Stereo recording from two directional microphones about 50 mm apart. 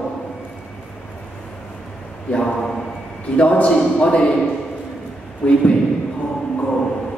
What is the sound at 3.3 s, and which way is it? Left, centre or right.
Speech, left.